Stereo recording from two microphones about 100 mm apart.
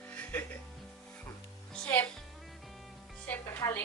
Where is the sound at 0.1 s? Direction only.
15° left (ahead or behind).